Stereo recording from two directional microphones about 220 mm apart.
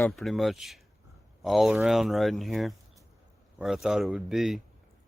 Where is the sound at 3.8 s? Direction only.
Centre (ahead or behind).